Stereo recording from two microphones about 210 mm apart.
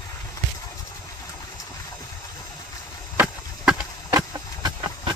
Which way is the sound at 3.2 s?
5° right (ahead or behind).